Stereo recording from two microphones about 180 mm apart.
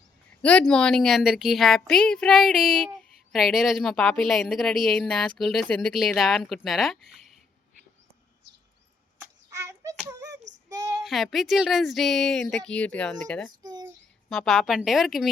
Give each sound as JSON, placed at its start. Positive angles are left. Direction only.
{"t": 0.4, "sound": "a woman's voice", "side_deg": 5}
{"t": 9.5, "sound": "hands", "side_deg": -15}
{"t": 10.7, "sound": "child singing", "side_deg": -20}
{"t": 11.0, "sound": "a woman's voice", "side_deg": 0}
{"t": 13.6, "sound": "a sound", "side_deg": -20}
{"t": 14.3, "sound": "a woman's voice", "side_deg": 0}